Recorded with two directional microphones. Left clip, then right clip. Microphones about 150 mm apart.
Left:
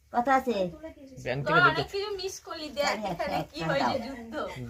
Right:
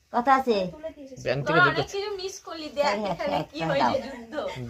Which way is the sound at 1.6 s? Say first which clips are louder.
Right 1 dB; 10° right (ahead or behind).